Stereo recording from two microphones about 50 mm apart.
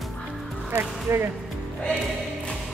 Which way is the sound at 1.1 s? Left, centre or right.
Right.